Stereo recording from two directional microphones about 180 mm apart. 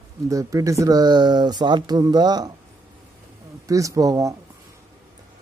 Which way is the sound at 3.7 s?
20° right (ahead or behind).